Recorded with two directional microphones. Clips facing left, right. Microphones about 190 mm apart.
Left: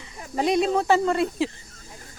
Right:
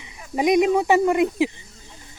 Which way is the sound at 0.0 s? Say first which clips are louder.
Right 3 dB; 15° right (ahead or behind).